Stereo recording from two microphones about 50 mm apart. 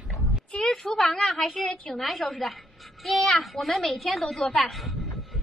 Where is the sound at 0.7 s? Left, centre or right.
Centre.